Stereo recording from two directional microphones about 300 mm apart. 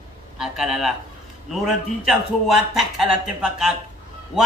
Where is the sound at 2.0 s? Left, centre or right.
Centre.